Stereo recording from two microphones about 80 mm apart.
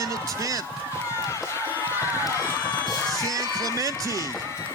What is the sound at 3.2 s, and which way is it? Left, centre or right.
Speech, right.